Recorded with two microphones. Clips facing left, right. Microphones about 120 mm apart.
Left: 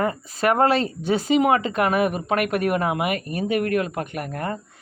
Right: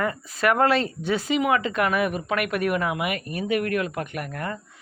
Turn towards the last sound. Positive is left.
turn(degrees=35)  # may be behind; listen again after turning